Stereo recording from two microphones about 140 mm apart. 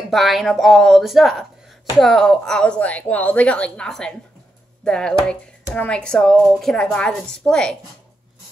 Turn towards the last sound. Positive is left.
turn(degrees=5)  # may be behind; listen again after turning